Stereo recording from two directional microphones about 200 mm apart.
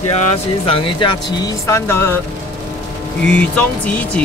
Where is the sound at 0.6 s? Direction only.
25° left (ahead or behind).